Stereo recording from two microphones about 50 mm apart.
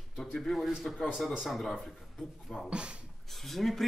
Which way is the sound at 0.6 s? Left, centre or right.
Centre.